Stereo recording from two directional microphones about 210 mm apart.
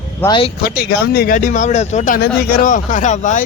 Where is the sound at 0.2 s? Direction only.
20° left (ahead or behind).